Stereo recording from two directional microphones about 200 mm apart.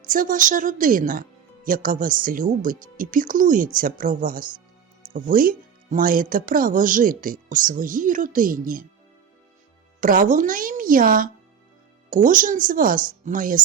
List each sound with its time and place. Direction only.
0.0 s speech: 40° right (ahead or behind)
10.0 s speech: 40° right (ahead or behind)